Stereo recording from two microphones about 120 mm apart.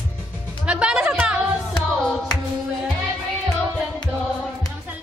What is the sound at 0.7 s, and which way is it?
Music, 10° right (ahead or behind).